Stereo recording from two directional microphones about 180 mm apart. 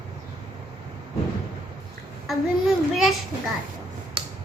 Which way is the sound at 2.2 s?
Centre (ahead or behind).